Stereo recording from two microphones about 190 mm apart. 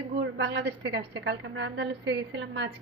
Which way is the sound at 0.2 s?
60° right (ahead or behind).